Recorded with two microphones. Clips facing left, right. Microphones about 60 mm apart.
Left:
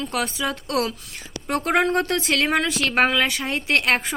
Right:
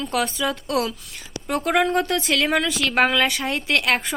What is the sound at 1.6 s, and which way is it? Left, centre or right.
A woman's voice, left.